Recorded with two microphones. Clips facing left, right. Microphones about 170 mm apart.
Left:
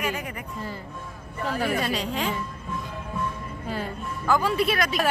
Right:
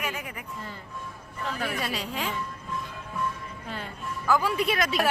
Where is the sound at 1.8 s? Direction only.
5° right (ahead or behind).